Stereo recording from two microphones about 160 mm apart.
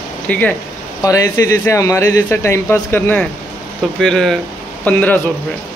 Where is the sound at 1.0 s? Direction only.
20° left (ahead or behind).